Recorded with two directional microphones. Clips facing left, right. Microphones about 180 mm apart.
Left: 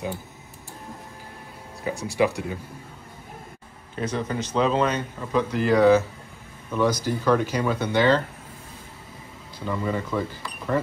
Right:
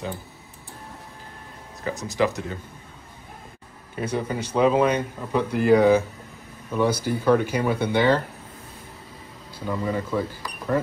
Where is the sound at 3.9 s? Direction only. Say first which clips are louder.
Right 1 dB; 10° right (ahead or behind).